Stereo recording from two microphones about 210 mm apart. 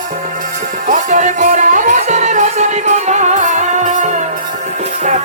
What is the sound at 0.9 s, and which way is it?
Music, 35° right (ahead or behind).